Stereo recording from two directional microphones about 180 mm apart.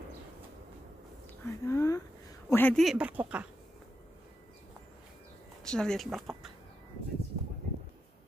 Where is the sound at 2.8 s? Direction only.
5° right (ahead or behind).